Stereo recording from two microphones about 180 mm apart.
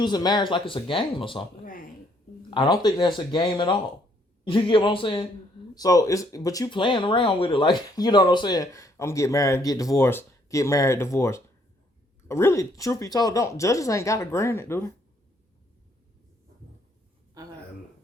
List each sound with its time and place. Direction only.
0.0 s speech: 25° left (ahead or behind)
2.5 s speech: 25° left (ahead or behind)
17.4 s a sound: 20° right (ahead or behind)